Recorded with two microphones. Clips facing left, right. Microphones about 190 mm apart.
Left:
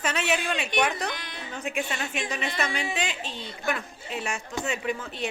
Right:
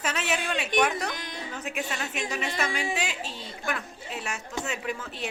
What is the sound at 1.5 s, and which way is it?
A woman's voice, 5° right (ahead or behind).